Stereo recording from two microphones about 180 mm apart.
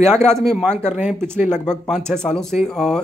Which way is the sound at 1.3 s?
40° left (ahead or behind).